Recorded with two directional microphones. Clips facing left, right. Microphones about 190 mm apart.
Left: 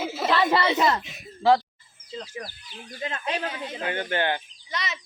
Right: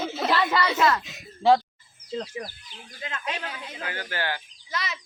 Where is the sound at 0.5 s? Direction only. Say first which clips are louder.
Left 1 dB; 25° left (ahead or behind).